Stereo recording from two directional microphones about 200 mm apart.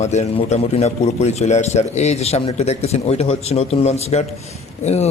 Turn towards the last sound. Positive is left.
turn(degrees=35)  # may be behind; listen again after turning